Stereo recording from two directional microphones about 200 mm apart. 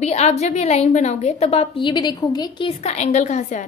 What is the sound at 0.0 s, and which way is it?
A woman's voice, 35° left (ahead or behind).